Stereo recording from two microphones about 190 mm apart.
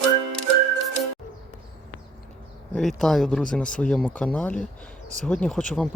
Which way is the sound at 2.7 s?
Centre (ahead or behind).